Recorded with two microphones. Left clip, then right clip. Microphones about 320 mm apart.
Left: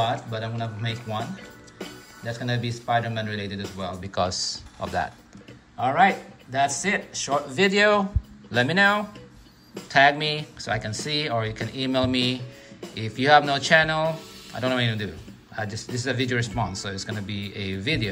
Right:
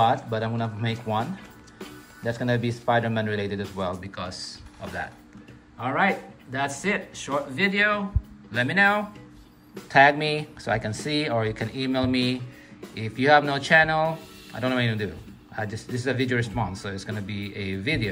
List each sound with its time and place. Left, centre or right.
0.3 s speech: centre
4.1 s speech: centre